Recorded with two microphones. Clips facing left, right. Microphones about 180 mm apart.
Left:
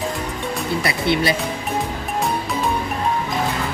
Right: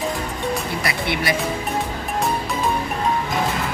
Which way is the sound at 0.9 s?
25° left (ahead or behind).